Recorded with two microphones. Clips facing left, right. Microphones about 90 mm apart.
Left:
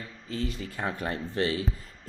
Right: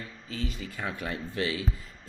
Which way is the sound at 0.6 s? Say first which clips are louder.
Left 3 dB; 35° left (ahead or behind).